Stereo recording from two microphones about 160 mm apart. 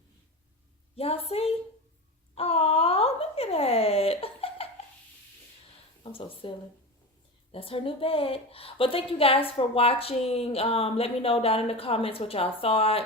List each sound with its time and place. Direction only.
0.9 s a woman's voice: 35° left (ahead or behind)
2.3 s a sound: 40° left (ahead or behind)
6.0 s speech: 35° left (ahead or behind)
7.5 s a woman's voice: 35° left (ahead or behind)